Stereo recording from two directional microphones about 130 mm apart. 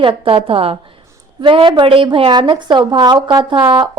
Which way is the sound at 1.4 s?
40° right (ahead or behind).